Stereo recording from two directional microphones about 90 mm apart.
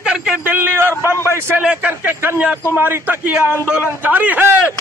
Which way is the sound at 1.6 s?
15° right (ahead or behind).